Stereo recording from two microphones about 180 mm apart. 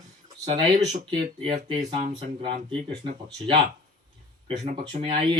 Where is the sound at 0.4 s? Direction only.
20° right (ahead or behind).